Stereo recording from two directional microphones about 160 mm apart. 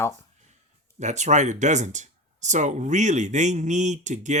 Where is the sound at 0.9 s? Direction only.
45° right (ahead or behind).